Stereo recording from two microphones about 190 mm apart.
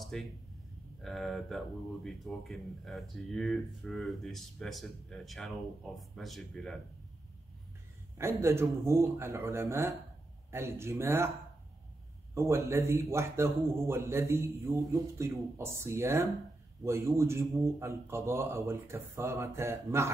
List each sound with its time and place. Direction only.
0.0 s a sound: centre (ahead or behind)
1.0 s speech: centre (ahead or behind)
8.2 s speech: 15° right (ahead or behind)
12.4 s speech: 15° right (ahead or behind)